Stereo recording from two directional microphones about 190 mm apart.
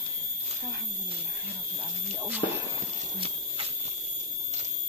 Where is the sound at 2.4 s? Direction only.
35° left (ahead or behind).